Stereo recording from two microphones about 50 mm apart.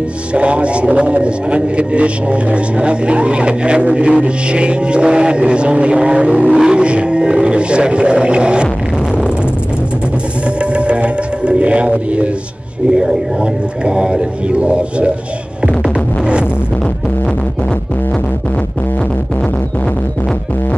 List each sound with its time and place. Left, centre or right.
0.3 s a man's voice: right
10.6 s music: right
12.9 s a man's voice: centre
15.6 s music: right